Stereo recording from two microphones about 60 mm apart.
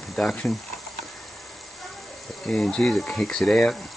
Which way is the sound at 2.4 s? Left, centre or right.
Centre.